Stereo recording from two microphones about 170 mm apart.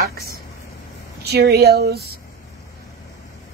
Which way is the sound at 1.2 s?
70° right (ahead or behind).